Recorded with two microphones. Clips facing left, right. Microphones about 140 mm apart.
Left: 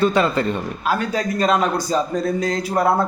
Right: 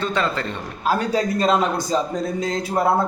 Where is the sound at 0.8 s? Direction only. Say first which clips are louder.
Right 4 dB; 35° right (ahead or behind).